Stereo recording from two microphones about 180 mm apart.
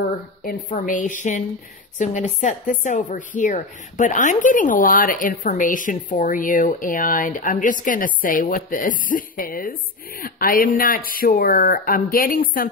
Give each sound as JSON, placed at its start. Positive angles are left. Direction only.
{"t": 0.4, "sound": "speech", "side_deg": 50}